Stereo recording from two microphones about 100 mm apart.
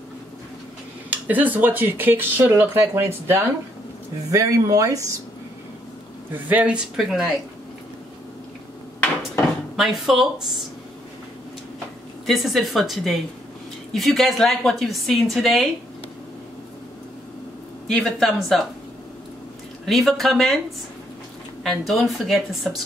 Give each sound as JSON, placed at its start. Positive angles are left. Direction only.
{"t": 1.1, "sound": "speech", "side_deg": -15}
{"t": 4.3, "sound": "speech", "side_deg": -35}
{"t": 6.3, "sound": "speech", "side_deg": -15}
{"t": 7.0, "sound": "a woman's voice", "side_deg": 0}
{"t": 9.8, "sound": "a woman's voice", "side_deg": 0}
{"t": 12.3, "sound": "a woman's voice", "side_deg": 0}
{"t": 17.8, "sound": "a woman's voice", "side_deg": 0}
{"t": 19.8, "sound": "a woman's voice", "side_deg": 0}
{"t": 21.6, "sound": "a woman's voice", "side_deg": 0}